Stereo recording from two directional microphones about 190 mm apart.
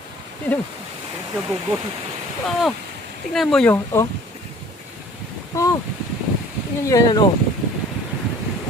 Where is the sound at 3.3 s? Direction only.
Centre (ahead or behind).